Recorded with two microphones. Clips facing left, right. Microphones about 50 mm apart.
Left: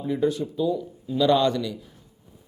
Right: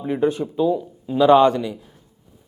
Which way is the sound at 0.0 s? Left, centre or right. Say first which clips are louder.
Right 3 dB; right.